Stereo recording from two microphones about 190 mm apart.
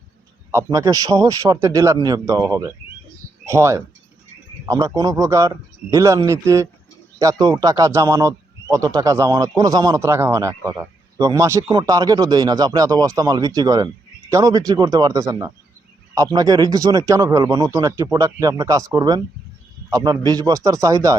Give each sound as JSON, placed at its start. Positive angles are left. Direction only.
{"t": 0.5, "sound": "a man's voice", "side_deg": -15}